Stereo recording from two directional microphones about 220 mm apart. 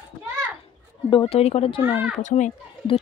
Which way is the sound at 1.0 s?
25° left (ahead or behind).